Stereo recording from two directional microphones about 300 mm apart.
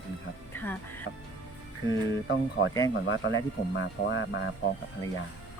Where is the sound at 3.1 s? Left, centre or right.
Left.